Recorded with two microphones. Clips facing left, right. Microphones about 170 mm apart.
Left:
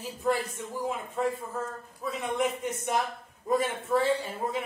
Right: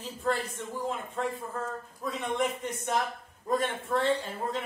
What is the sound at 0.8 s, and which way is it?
A woman's voice, 5° left (ahead or behind).